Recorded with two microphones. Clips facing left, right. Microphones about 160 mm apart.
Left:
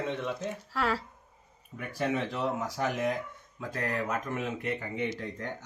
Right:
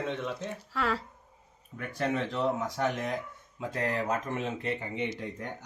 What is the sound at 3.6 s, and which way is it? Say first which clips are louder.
Speech: right 2 dB; 25° right (ahead or behind).